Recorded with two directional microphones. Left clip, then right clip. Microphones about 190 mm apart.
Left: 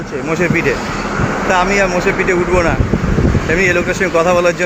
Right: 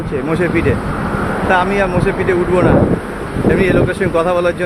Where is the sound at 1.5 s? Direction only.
5° right (ahead or behind).